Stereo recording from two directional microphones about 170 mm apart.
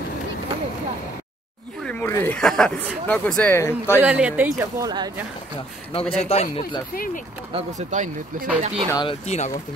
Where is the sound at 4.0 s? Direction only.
5° right (ahead or behind); by 5.1 s 25° right (ahead or behind).